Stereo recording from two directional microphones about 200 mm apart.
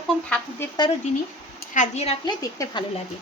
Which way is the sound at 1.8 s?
30° left (ahead or behind).